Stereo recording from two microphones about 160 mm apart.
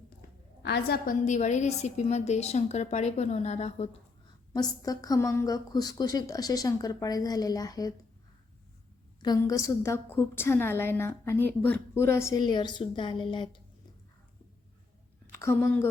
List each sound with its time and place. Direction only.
0.6 s a woman's voice: 85° left
1.2 s a woman's voice: 50° left (ahead or behind)
4.5 s a woman's voice: 25° left (ahead or behind)
9.2 s a woman's voice: 25° left (ahead or behind)
15.3 s a woman's voice: 15° left (ahead or behind)